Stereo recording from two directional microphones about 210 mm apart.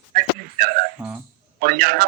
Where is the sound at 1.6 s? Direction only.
45° right (ahead or behind).